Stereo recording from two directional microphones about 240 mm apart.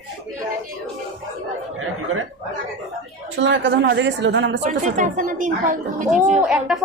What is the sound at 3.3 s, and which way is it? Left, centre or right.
Speech, right.